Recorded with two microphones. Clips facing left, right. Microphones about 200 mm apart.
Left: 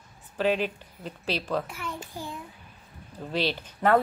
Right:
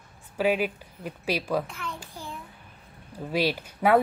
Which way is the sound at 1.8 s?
15° left (ahead or behind).